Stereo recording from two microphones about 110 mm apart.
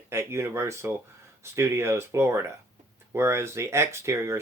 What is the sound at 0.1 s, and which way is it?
Speech, 25° right (ahead or behind).